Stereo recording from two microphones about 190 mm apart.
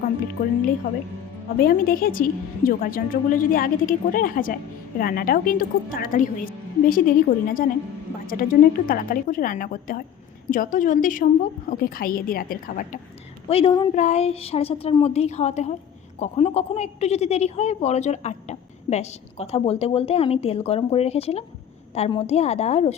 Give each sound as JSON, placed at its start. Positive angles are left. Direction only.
{"t": 0.4, "sound": "a woman's voice", "side_deg": 40}
{"t": 1.5, "sound": "a woman's voice", "side_deg": 50}
{"t": 13.5, "sound": "a woman's voice", "side_deg": 30}
{"t": 13.9, "sound": "speech", "side_deg": 35}